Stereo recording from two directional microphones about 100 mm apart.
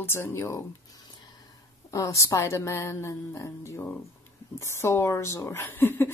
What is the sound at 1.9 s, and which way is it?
Speech, 30° left (ahead or behind).